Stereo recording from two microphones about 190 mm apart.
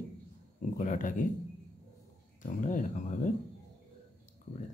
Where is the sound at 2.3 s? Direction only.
45° left (ahead or behind).